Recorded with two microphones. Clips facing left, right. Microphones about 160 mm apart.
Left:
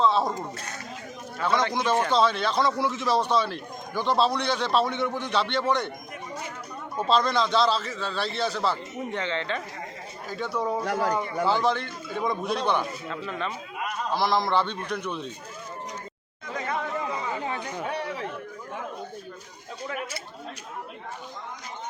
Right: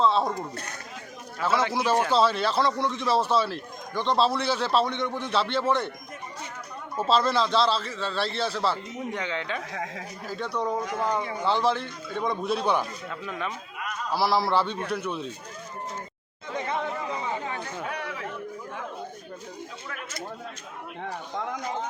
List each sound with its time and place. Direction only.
0.0 s speech: centre (ahead or behind)
1.4 s a man's voice: 5° right (ahead or behind)
6.9 s a man's voice: 5° right (ahead or behind)
16.6 s chatter: 20° right (ahead or behind)
17.5 s chatter: 15° left (ahead or behind)
17.8 s a sound: 30° left (ahead or behind)